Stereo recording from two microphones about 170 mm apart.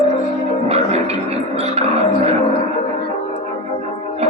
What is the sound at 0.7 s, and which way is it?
Speech, 40° right (ahead or behind).